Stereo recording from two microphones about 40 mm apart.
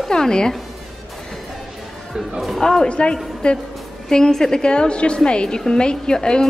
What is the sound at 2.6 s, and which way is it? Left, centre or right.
Speech, centre.